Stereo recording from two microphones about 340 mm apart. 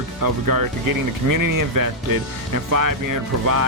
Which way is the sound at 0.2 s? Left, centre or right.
Right.